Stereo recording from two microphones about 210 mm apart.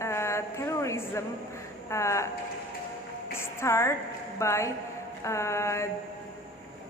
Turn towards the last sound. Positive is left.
turn(degrees=15)  # may be behind; listen again after turning